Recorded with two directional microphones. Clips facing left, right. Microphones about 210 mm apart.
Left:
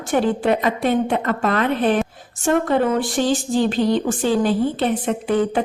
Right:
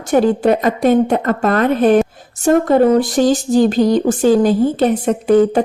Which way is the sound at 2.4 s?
40° right (ahead or behind).